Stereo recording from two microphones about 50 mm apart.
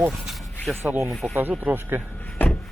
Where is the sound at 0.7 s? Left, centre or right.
Centre.